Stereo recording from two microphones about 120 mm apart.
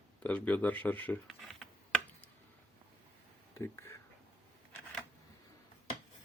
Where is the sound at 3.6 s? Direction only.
20° left (ahead or behind).